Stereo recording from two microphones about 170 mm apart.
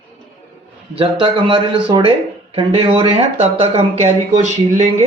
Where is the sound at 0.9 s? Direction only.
30° right (ahead or behind).